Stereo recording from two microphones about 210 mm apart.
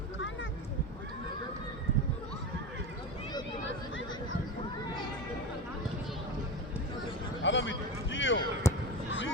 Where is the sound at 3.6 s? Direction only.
60° left (ahead or behind).